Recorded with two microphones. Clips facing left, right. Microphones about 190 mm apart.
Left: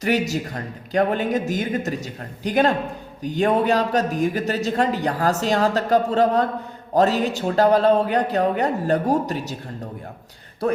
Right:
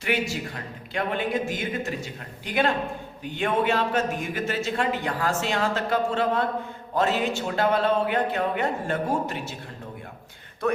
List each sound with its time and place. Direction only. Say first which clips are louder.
0.0 s speech: left 5 dB; 40° left (ahead or behind)